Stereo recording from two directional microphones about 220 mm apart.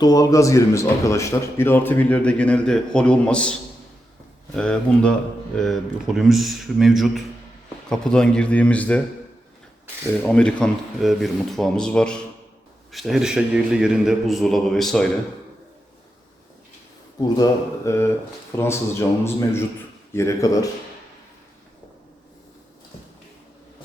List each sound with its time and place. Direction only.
0.0 s a man's voice: 15° left (ahead or behind)
4.5 s a man's voice: 5° left (ahead or behind)
10.2 s a man's voice: 5° left (ahead or behind)
17.2 s a man's voice: 20° left (ahead or behind)